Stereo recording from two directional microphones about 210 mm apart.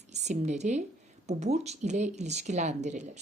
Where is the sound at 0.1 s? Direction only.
35° right (ahead or behind).